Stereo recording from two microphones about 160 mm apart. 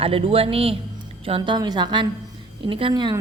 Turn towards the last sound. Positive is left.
turn(degrees=-30)  # may be behind; listen again after turning